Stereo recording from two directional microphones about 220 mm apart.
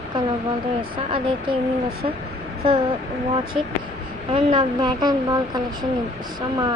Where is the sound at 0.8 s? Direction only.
25° right (ahead or behind).